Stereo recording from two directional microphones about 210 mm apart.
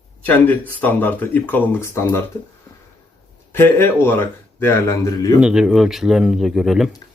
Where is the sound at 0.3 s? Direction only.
5° left (ahead or behind).